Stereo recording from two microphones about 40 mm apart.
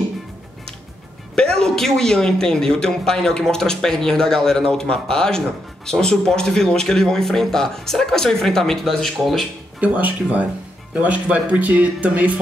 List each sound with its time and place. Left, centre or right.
1.3 s a man's voice: centre
9.8 s speech: right
10.9 s speech: right